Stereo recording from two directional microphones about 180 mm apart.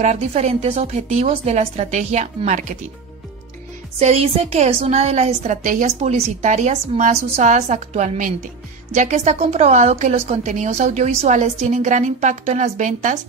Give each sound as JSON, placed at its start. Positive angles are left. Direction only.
{"t": 0.0, "sound": "a woman's voice", "side_deg": -40}
{"t": 4.0, "sound": "a woman's voice", "side_deg": -35}